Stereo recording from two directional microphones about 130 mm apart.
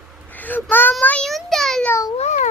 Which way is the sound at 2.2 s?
65° left (ahead or behind).